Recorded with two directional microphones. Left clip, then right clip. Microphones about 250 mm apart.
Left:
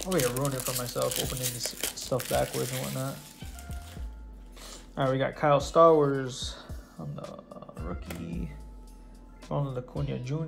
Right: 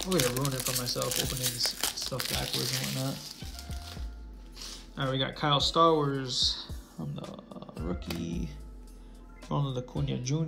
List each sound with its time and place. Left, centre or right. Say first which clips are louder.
0.0 s speech: left 1 dB; centre
2.5 s speech: right 1 dB; right
4.6 s speech: left 5 dB; centre
7.6 s speech: right 4 dB; centre
9.5 s speech: left 1 dB; centre